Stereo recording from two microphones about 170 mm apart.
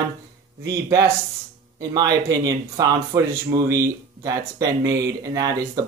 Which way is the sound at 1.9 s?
20° right (ahead or behind).